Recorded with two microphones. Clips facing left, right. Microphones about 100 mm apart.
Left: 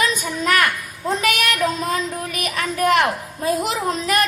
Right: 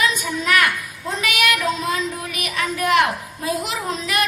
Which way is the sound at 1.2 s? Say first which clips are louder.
Right 1 dB; 40° left (ahead or behind).